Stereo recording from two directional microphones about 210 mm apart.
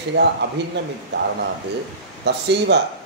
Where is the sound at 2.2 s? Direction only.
55° right (ahead or behind).